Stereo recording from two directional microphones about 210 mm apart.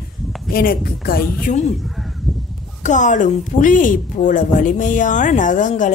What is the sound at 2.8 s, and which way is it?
A woman's voice, 35° left (ahead or behind).